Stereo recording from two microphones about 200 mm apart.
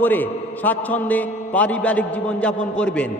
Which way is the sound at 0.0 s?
10° left (ahead or behind).